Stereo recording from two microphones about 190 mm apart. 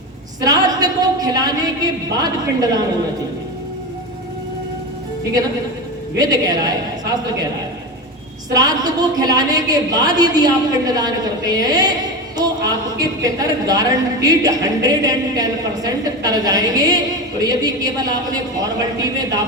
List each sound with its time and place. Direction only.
0.4 s a man's voice: 20° right (ahead or behind)
6.1 s a woman's voice: 20° right (ahead or behind)
8.5 s a woman's voice: 20° right (ahead or behind)